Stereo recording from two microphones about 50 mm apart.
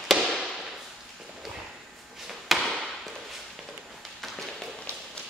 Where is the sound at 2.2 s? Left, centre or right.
Centre.